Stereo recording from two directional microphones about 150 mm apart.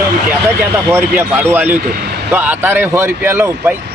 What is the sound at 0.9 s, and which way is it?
Speech, 15° right (ahead or behind).